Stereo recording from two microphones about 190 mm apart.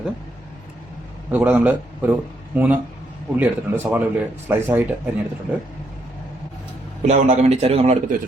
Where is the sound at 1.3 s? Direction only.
10° right (ahead or behind).